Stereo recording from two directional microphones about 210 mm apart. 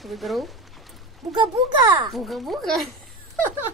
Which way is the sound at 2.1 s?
Centre (ahead or behind).